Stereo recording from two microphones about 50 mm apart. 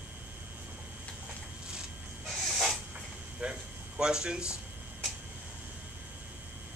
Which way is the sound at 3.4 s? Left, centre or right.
Right.